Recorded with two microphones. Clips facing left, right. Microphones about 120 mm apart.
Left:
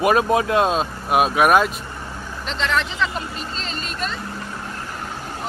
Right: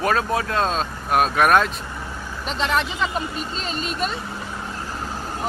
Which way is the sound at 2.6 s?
45° right (ahead or behind).